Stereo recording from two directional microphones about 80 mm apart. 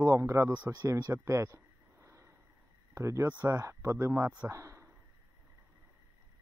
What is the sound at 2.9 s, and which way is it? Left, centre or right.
Speech, right.